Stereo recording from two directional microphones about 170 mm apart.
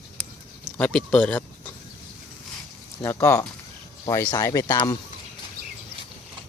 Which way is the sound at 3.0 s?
15° left (ahead or behind).